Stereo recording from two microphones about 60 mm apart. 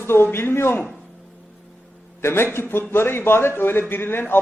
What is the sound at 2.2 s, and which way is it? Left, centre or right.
A man's voice, left.